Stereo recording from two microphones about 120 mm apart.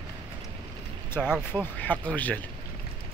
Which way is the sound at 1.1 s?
10° left (ahead or behind).